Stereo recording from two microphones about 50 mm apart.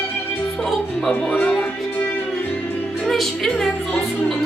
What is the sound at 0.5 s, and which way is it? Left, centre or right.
Speech, centre.